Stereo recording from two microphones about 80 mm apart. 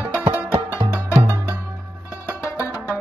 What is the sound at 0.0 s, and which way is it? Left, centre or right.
Music, right.